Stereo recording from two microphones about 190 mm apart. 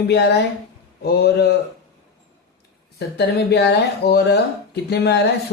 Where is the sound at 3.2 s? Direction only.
60° left (ahead or behind).